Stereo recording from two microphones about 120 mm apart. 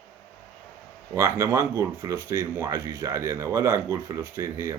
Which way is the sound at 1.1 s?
25° right (ahead or behind).